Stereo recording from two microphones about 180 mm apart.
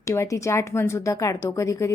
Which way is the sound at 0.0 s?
15° left (ahead or behind).